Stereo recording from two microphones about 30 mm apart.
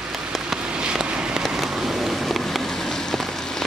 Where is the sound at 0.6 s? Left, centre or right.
Right.